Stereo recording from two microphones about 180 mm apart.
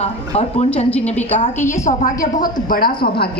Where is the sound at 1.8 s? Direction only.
45° left (ahead or behind).